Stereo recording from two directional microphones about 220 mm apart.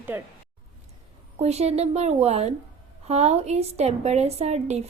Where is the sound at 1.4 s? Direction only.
30° right (ahead or behind).